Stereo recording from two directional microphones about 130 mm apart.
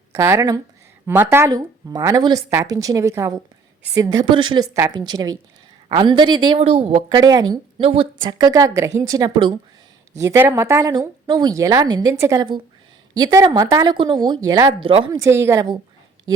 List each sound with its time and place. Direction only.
0.1 s a woman's voice: 20° right (ahead or behind); by 6.6 s 35° right (ahead or behind)
6.6 s speech: 50° right (ahead or behind)
7.2 s speech: 30° right (ahead or behind)
7.8 s speech: 45° right (ahead or behind)
8.3 s speech: 30° right (ahead or behind)
10.2 s a woman's voice: 20° right (ahead or behind)
13.9 s a woman's voice: 40° right (ahead or behind)
14.8 s speech: 45° right (ahead or behind)
15.2 s speech: 20° right (ahead or behind)